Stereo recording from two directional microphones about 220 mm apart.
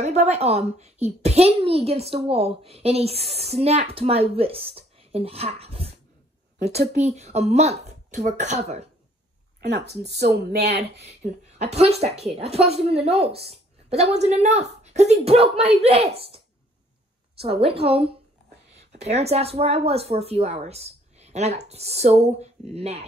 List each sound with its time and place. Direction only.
0.0 s a woman's voice: 30° right (ahead or behind)
7.0 s speech: 30° right (ahead or behind)
9.6 s speech: 50° right (ahead or behind)
11.1 s a woman's voice: 30° right (ahead or behind)